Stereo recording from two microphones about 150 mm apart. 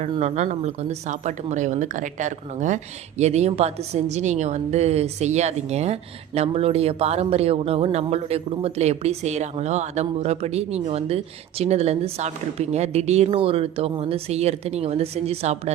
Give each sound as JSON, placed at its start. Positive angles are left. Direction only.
{"t": 0.2, "sound": "speech", "side_deg": -50}